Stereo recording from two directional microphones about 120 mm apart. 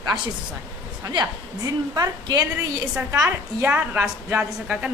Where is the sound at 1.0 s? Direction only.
40° right (ahead or behind).